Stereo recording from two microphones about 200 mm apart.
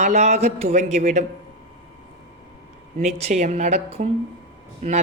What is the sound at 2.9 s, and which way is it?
A woman's voice, 35° right (ahead or behind).